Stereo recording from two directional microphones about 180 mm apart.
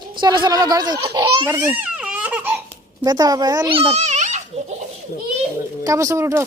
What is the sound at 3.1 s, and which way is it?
A child's voice, 20° right (ahead or behind).